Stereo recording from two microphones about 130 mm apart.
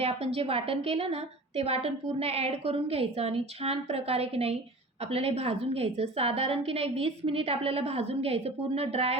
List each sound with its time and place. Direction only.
0.0 s a woman's voice: 50° right (ahead or behind)